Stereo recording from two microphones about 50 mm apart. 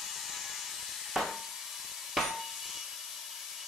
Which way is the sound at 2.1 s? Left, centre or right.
Centre.